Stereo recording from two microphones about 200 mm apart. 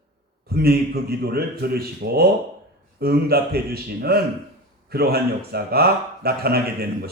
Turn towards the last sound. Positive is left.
turn(degrees=-50)  # may be behind; listen again after turning